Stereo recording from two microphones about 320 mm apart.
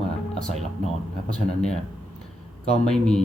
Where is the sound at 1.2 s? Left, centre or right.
Centre.